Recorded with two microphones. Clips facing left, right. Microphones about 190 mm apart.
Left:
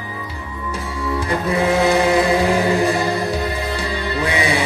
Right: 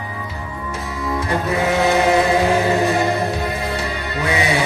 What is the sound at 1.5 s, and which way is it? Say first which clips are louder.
Chant: left 2 dB; 30° left (ahead or behind).